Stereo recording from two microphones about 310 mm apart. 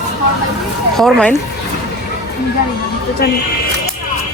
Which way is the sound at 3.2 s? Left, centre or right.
Left.